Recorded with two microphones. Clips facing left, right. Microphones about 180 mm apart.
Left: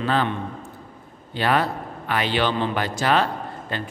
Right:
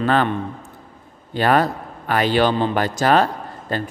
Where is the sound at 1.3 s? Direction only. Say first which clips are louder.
Right 4 dB; 45° right (ahead or behind).